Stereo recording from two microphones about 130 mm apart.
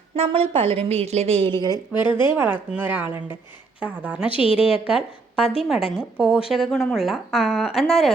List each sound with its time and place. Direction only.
0.2 s a woman's voice: 45° right (ahead or behind)
1.5 s a woman's voice: 30° right (ahead or behind)
2.1 s a woman's voice: 15° right (ahead or behind)
4.3 s a woman's voice: 45° left (ahead or behind)
6.0 s a woman's voice: 10° right (ahead or behind)